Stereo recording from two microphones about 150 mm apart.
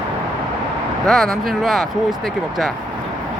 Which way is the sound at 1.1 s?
Centre (ahead or behind).